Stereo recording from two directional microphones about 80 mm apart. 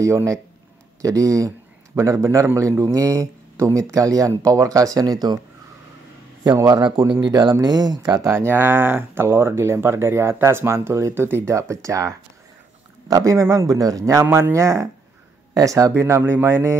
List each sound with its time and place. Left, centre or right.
0.0 s a man's voice: right
6.5 s a man's voice: right
7.0 s speech: right
8.3 s a man's voice: right
14.2 s speech: right